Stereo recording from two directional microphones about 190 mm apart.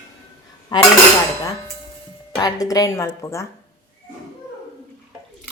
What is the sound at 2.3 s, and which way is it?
Speech, 20° left (ahead or behind).